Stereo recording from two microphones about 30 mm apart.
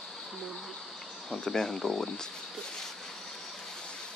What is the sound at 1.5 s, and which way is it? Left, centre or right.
Speech, centre.